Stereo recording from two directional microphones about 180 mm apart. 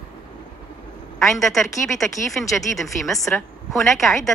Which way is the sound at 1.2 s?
Centre (ahead or behind).